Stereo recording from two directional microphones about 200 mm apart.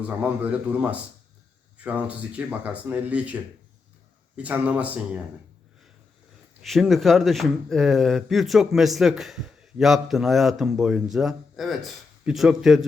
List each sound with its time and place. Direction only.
0.2 s speech: 5° right (ahead or behind)
4.4 s speech: 5° right (ahead or behind)
6.6 s a man's voice: centre (ahead or behind)